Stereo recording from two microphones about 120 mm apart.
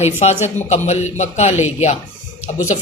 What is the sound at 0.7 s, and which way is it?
Speech, 75° left (ahead or behind).